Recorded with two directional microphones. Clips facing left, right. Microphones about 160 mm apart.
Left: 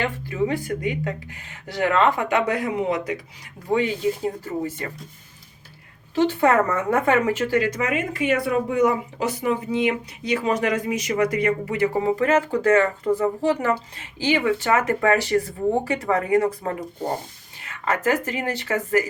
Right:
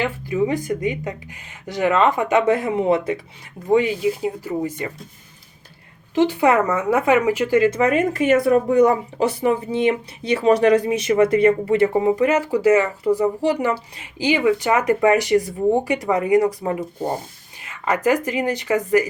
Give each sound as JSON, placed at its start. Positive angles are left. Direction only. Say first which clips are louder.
{"t": 0.0, "sound": "speech", "louder": "right 3 dB", "side_deg": -15}
{"t": 3.7, "sound": "speech", "louder": "right 4 dB", "side_deg": -15}
{"t": 6.1, "sound": "speech", "louder": "right 2 dB", "side_deg": -15}
{"t": 17.8, "sound": "speech", "louder": "right 3 dB", "side_deg": -15}